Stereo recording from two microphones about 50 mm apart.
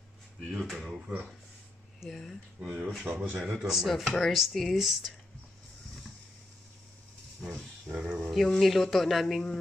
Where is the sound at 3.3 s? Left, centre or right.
Centre.